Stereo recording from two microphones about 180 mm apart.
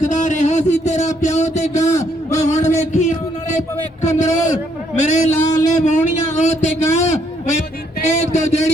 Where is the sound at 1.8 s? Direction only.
15° left (ahead or behind).